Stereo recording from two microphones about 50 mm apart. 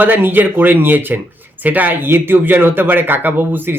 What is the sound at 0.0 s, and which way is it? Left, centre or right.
Speech, right.